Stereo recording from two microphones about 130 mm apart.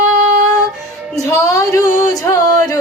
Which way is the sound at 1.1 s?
25° left (ahead or behind).